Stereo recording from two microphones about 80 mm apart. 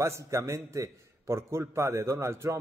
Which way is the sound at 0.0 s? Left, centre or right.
Right.